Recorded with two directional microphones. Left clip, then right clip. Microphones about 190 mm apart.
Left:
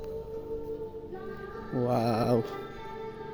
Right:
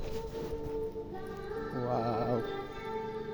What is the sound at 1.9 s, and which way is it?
Music, 75° left (ahead or behind).